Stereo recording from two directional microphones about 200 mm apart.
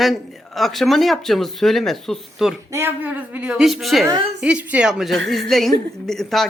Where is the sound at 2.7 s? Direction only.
10° right (ahead or behind).